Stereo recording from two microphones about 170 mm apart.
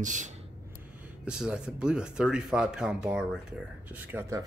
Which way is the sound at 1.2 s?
5° right (ahead or behind).